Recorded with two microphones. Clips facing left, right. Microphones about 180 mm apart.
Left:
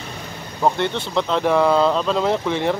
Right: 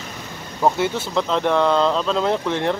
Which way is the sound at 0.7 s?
5° right (ahead or behind).